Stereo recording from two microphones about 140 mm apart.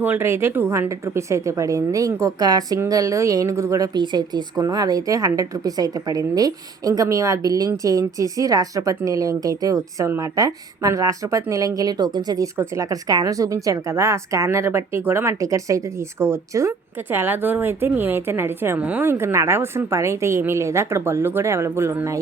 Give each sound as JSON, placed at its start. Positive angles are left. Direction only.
{"t": 0.0, "sound": "a woman's voice", "side_deg": -15}